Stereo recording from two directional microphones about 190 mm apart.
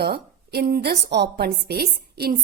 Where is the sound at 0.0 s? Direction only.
55° right (ahead or behind).